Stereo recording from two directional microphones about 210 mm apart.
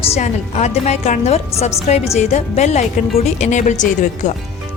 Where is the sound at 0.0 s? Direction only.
30° left (ahead or behind).